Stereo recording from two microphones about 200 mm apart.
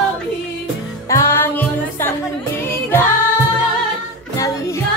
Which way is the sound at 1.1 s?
15° left (ahead or behind).